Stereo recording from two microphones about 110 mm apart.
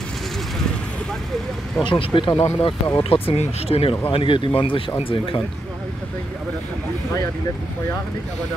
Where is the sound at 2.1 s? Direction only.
45° left (ahead or behind).